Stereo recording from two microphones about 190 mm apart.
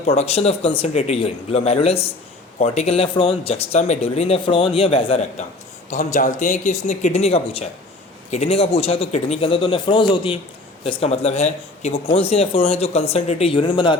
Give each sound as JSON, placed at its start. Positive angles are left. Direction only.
{"t": 0.0, "sound": "speech", "side_deg": 35}